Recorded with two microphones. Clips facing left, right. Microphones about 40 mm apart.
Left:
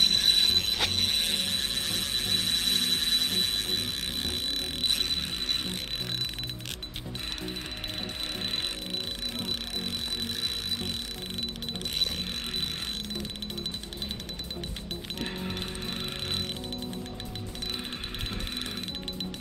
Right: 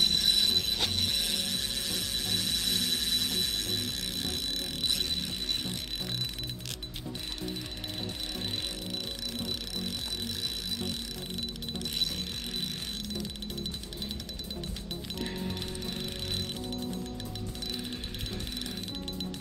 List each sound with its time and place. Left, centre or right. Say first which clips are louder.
0.0 s music: left 3 dB; left
0.7 s ratchet: left 3 dB; left
8.5 s music: left 3 dB; left
10.3 s a sound: left 3 dB; left
11.8 s mechanisms: left 2 dB; left